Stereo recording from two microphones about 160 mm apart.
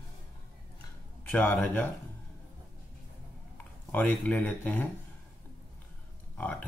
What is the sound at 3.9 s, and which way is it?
Speech, 10° left (ahead or behind).